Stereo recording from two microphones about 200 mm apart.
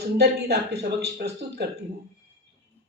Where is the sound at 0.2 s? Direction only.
55° right (ahead or behind).